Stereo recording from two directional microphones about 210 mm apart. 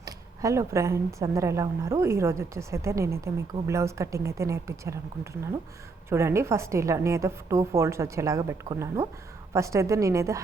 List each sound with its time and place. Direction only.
0.0 s speech: 15° right (ahead or behind)